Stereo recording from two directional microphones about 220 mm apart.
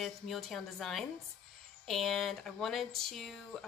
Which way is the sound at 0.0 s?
Centre (ahead or behind).